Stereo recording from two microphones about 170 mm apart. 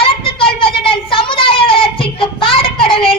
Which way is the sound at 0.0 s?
30° left (ahead or behind).